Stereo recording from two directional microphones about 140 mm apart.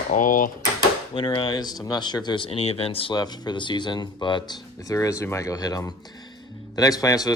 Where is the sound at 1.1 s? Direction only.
40° left (ahead or behind).